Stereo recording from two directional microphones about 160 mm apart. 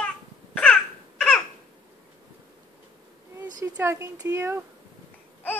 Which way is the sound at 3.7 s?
15° right (ahead or behind).